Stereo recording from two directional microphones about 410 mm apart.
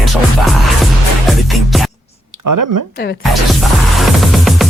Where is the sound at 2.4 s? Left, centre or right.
Right.